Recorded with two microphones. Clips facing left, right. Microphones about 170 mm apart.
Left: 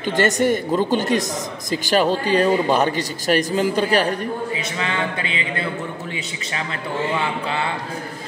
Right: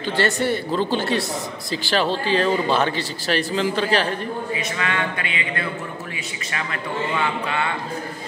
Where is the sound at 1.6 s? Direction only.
45° left (ahead or behind).